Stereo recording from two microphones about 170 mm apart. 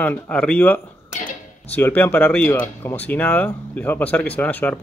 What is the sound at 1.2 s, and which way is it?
Guitar, 50° left (ahead or behind).